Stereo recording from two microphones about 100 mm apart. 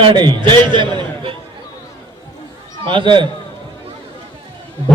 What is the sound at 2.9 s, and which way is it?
Speech, 55° right (ahead or behind).